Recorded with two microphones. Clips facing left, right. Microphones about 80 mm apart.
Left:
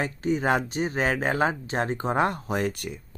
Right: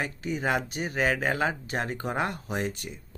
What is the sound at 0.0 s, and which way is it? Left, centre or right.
Speech, left.